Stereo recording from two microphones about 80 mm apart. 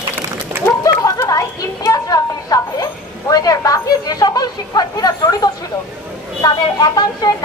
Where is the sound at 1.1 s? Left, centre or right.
Left.